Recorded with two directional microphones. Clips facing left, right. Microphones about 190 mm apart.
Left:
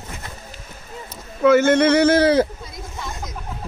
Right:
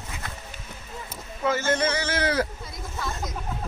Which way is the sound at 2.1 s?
30° left (ahead or behind).